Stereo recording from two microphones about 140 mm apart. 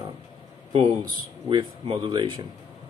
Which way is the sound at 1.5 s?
35° right (ahead or behind).